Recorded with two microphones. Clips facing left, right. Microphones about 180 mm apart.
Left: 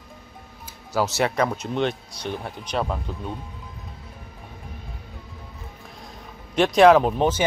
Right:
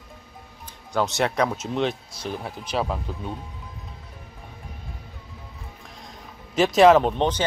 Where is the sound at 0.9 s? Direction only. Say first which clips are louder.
Left 1 dB; centre (ahead or behind).